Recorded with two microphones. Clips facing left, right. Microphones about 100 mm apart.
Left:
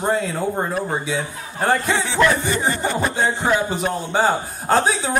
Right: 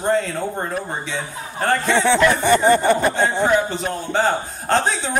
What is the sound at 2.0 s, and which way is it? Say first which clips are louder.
Speech: right 2 dB; 65° right (ahead or behind).